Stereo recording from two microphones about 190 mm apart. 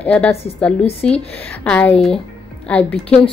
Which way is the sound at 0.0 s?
5° left (ahead or behind).